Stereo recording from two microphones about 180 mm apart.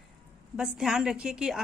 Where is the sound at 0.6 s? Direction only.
5° right (ahead or behind).